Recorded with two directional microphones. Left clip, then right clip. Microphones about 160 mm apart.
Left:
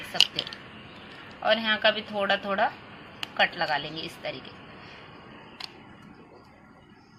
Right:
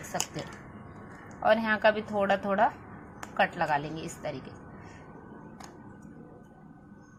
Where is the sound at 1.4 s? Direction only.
15° right (ahead or behind).